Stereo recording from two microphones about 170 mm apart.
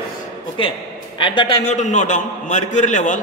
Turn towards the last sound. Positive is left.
turn(degrees=45)  # may be behind; listen again after turning